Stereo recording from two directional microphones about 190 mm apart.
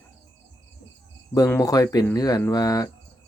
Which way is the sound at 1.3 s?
20° left (ahead or behind).